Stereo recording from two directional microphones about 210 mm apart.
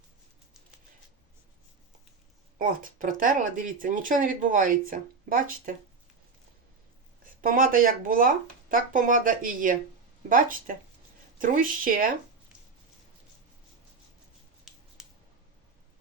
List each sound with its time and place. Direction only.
2.6 s speech: 40° right (ahead or behind)
7.4 s speech: 40° right (ahead or behind)
14.7 s a sound: centre (ahead or behind)